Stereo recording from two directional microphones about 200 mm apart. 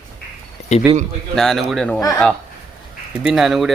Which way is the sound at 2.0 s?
20° left (ahead or behind).